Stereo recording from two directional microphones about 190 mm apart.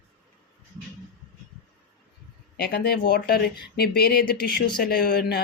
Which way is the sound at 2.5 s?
55° left (ahead or behind).